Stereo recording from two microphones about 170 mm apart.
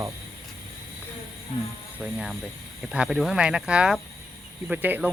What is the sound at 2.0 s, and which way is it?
Speech, centre (ahead or behind).